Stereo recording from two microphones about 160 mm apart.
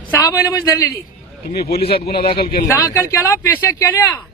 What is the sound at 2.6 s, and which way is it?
Speech, 20° left (ahead or behind).